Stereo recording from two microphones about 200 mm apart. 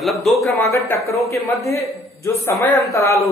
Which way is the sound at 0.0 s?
Centre (ahead or behind).